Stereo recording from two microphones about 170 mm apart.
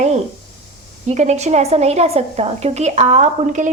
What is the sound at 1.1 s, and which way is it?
A woman's voice, 40° right (ahead or behind).